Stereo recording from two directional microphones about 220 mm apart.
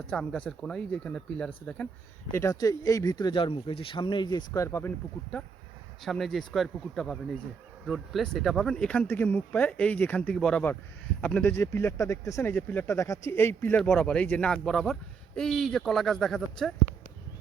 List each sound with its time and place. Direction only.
0.1 s speech: 5° left (ahead or behind)
6.0 s speech: centre (ahead or behind)